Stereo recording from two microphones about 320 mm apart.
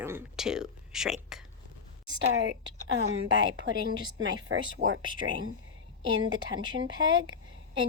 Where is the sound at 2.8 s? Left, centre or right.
Right.